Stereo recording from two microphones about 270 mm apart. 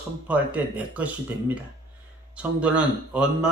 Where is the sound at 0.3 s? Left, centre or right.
Centre.